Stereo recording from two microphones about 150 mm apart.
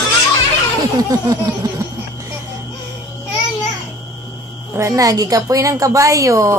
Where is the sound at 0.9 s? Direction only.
25° right (ahead or behind).